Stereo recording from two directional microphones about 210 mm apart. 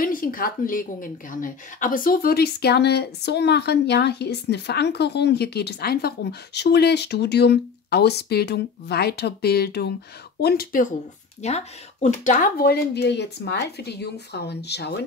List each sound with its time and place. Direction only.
0.0 s a woman's voice: 40° left (ahead or behind)
11.4 s a woman's voice: 30° left (ahead or behind); by 15.0 s 50° left (ahead or behind)